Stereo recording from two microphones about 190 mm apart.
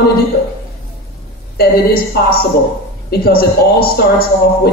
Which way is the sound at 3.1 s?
55° left (ahead or behind).